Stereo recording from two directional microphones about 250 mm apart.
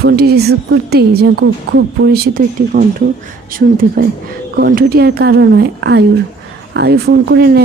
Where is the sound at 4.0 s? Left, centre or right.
Right.